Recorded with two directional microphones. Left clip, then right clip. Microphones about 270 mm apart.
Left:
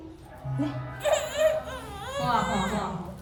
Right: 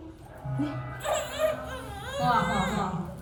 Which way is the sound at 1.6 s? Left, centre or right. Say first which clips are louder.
Left 1 dB; centre.